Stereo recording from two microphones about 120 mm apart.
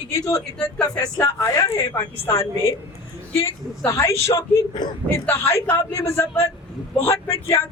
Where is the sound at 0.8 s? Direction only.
5° left (ahead or behind).